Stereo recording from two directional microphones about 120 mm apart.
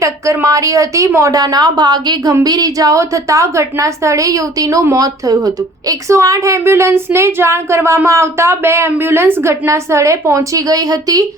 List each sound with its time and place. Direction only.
0.0 s a woman's voice: 25° right (ahead or behind)